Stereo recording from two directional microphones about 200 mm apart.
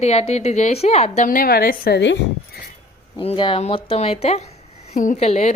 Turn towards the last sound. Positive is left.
turn(degrees=35)  # may be behind; listen again after turning